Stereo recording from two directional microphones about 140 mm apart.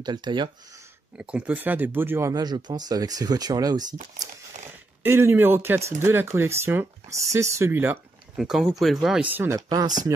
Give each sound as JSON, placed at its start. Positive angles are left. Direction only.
{"t": 0.0, "sound": "speech", "side_deg": -30}
{"t": 1.1, "sound": "speech", "side_deg": -10}
{"t": 5.0, "sound": "speech", "side_deg": -15}
{"t": 8.4, "sound": "speech", "side_deg": 0}
{"t": 9.6, "sound": "speech", "side_deg": -25}